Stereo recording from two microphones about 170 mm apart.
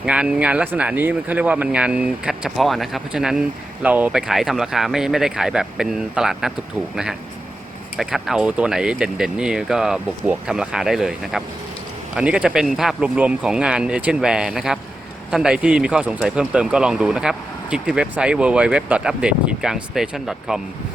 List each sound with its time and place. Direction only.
0.0 s speech: 5° right (ahead or behind)